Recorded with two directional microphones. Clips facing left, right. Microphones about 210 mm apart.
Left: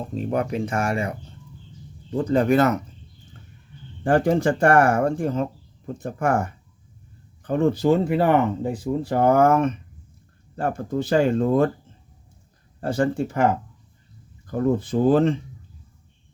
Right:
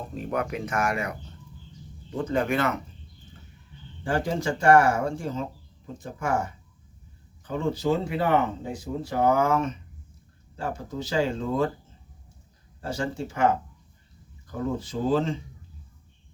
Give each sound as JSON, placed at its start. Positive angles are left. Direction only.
{"t": 0.1, "sound": "speech", "side_deg": 30}
{"t": 4.0, "sound": "speech", "side_deg": 55}
{"t": 12.8, "sound": "speech", "side_deg": 55}